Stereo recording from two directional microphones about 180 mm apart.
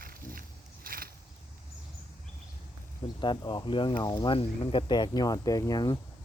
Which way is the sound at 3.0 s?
25° left (ahead or behind).